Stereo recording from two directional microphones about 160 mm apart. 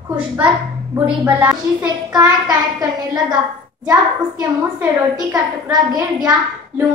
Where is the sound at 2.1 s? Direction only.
25° right (ahead or behind).